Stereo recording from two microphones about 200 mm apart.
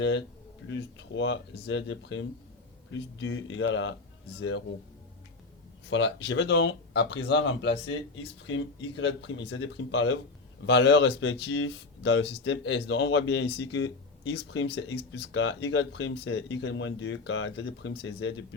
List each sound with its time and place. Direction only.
0.7 s speech: 65° left (ahead or behind)
5.9 s speech: 60° left (ahead or behind)